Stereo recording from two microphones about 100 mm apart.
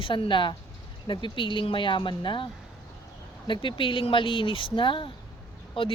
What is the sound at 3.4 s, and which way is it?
A woman's voice, 55° left (ahead or behind).